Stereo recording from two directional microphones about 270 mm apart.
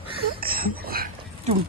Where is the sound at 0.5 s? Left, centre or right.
Right.